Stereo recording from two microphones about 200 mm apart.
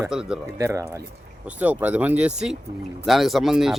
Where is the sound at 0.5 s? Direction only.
15° right (ahead or behind).